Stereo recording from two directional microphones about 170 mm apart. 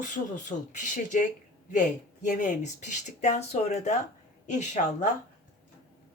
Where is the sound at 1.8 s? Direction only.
50° left (ahead or behind).